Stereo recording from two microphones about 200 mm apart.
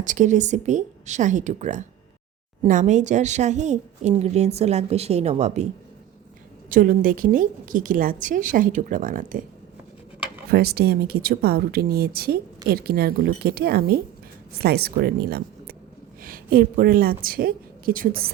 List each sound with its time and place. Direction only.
0.0 s speech: 40° right (ahead or behind)
6.7 s a woman's voice: 40° right (ahead or behind)
10.5 s a woman's voice: 50° right (ahead or behind)